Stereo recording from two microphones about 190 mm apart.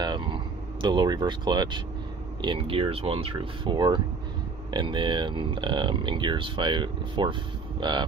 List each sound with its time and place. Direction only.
0.0 s speech: 25° right (ahead or behind)